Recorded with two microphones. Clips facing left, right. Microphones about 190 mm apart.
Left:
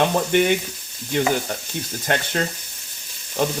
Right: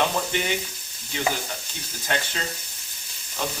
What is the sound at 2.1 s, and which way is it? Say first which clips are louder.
Speech: left 5 dB; 55° left (ahead or behind).